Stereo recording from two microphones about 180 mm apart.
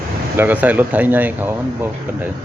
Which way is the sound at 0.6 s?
10° right (ahead or behind).